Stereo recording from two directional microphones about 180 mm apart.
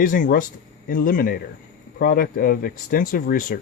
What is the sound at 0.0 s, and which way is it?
Speech, 50° left (ahead or behind).